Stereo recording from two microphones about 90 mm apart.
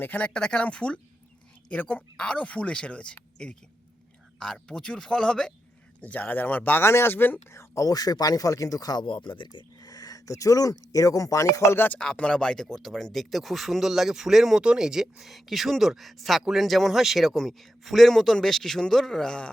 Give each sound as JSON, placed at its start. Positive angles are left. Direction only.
{"t": 0.0, "sound": "speech", "side_deg": 15}
{"t": 9.8, "sound": "speech", "side_deg": 45}
{"t": 11.9, "sound": "speech", "side_deg": 10}